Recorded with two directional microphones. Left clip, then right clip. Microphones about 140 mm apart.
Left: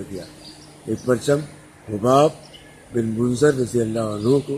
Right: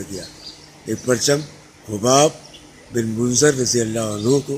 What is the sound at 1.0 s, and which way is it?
A man's voice, 20° right (ahead or behind).